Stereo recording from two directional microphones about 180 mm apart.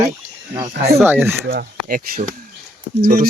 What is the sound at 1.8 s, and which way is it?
Speech, 50° right (ahead or behind).